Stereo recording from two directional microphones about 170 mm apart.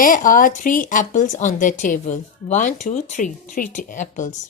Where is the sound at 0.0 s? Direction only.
55° left (ahead or behind).